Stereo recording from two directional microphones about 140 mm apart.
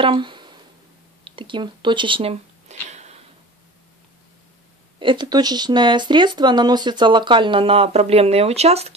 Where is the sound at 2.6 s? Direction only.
55° right (ahead or behind).